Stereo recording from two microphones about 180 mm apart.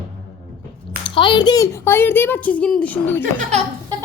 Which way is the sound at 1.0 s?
25° left (ahead or behind).